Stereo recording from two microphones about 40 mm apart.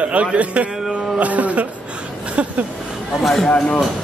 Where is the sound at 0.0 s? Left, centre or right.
Right.